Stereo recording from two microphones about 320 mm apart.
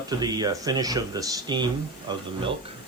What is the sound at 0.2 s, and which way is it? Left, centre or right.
Speech, centre.